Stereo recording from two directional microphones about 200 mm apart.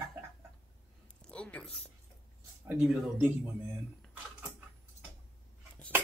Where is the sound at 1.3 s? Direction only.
5° left (ahead or behind).